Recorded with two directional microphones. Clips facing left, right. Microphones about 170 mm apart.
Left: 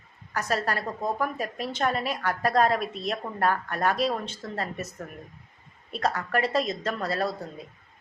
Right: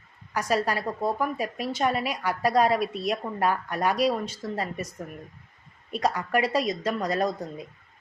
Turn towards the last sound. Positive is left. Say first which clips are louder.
# right 2 dB
turn(degrees=-15)  # may be behind; listen again after turning